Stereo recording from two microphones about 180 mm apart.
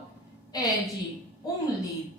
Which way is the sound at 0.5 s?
20° left (ahead or behind).